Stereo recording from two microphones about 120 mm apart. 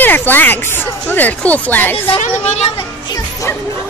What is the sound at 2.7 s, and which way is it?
Speech, 30° left (ahead or behind).